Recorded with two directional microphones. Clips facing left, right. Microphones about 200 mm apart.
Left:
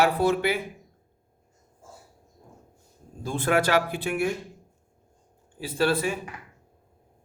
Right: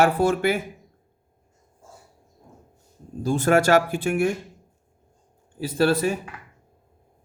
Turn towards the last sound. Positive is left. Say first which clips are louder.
# right 4 dB
turn(degrees=-45)  # may be behind; listen again after turning